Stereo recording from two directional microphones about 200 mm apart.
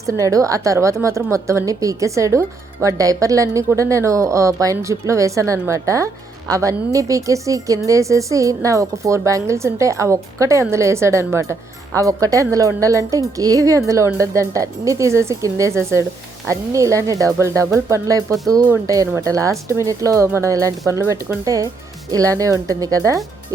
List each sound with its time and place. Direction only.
0.0 s speech: 15° right (ahead or behind)